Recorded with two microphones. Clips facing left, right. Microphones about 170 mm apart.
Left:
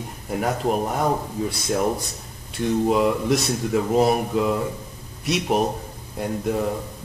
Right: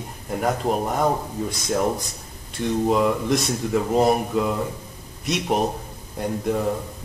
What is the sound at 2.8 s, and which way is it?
Speech, 5° left (ahead or behind).